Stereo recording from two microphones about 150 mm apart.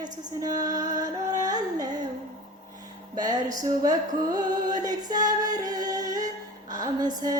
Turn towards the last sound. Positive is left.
turn(degrees=-25)  # may be behind; listen again after turning